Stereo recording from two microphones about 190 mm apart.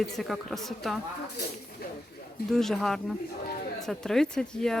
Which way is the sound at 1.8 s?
55° left (ahead or behind).